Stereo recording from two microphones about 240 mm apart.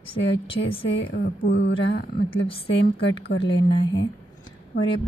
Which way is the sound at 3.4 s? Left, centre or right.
Left.